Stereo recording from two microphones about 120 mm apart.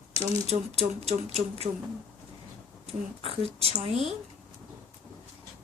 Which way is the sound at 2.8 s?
55° right (ahead or behind).